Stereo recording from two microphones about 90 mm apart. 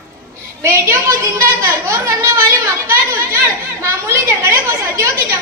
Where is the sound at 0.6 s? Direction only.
30° right (ahead or behind).